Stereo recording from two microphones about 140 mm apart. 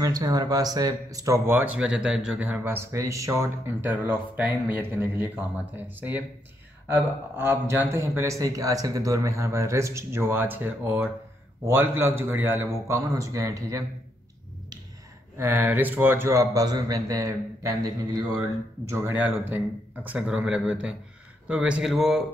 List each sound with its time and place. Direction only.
0.0 s speech: 25° right (ahead or behind)
15.3 s speech: 15° right (ahead or behind)
18.9 s speech: 15° right (ahead or behind)